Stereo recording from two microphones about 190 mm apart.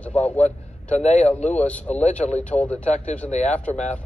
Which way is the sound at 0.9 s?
35° left (ahead or behind).